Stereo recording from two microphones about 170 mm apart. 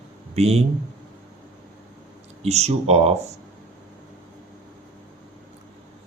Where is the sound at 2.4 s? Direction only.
40° right (ahead or behind).